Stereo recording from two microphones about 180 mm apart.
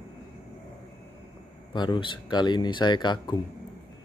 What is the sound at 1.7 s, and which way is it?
Speech, 25° left (ahead or behind).